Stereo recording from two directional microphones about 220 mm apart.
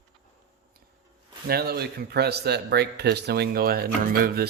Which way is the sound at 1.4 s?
45° right (ahead or behind).